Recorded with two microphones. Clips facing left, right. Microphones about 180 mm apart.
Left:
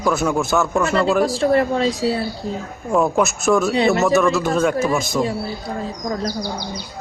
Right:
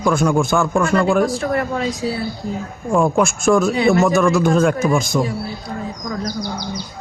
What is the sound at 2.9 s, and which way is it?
A man's voice, 5° left (ahead or behind).